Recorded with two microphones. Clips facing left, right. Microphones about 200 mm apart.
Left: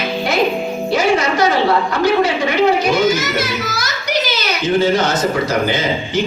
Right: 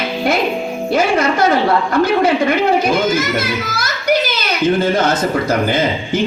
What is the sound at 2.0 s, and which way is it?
A child's voice, 55° right (ahead or behind).